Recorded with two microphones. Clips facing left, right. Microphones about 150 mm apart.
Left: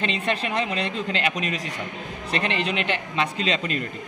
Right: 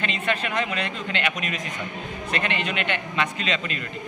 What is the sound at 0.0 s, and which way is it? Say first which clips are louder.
Speech: left 1 dB; 35° left (ahead or behind).